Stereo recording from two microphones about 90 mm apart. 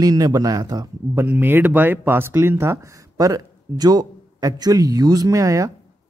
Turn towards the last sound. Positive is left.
turn(degrees=-40)  # may be behind; listen again after turning